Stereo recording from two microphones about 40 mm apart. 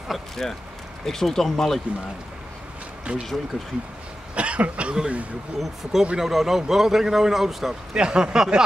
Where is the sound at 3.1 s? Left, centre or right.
Right.